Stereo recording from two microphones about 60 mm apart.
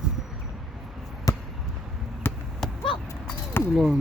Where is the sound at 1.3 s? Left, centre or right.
Left.